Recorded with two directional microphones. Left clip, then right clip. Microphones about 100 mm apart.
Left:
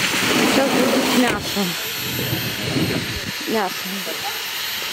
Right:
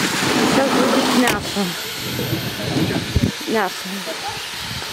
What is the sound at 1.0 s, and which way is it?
Speech, centre (ahead or behind).